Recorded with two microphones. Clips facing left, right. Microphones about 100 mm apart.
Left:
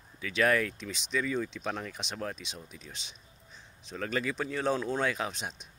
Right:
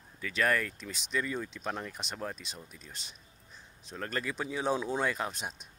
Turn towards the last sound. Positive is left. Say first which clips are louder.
# left 1 dB
turn(degrees=-5)  # may be behind; listen again after turning